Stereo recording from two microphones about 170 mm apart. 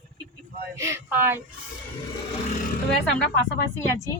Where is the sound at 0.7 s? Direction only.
15° right (ahead or behind).